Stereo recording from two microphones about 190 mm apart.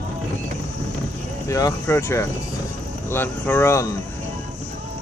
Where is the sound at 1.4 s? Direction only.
15° left (ahead or behind).